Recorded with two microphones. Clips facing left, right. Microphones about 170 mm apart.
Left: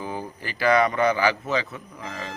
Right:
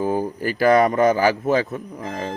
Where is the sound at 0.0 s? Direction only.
45° right (ahead or behind).